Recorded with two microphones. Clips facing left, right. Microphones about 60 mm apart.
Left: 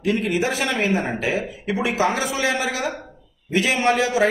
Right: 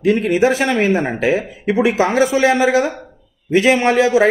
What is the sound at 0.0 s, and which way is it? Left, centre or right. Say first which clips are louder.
Speech: right 7 dB; right.